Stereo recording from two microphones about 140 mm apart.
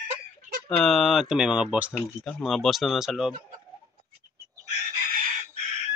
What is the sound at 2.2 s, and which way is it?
Speech, centre (ahead or behind).